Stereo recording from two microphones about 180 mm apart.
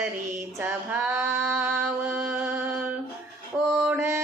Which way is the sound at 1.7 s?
10° right (ahead or behind).